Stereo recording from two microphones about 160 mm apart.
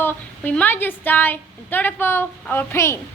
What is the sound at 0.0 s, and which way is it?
Speech, 10° left (ahead or behind).